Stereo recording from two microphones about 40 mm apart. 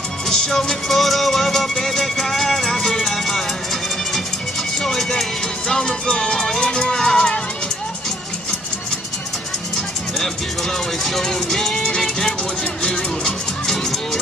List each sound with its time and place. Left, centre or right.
0.3 s music: centre
4.7 s music: centre
11.1 s music: centre